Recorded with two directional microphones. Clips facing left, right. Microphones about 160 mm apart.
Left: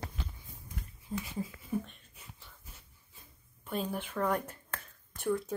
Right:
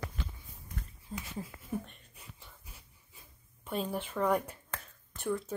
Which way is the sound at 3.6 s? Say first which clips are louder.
Right 1 dB; 5° left (ahead or behind).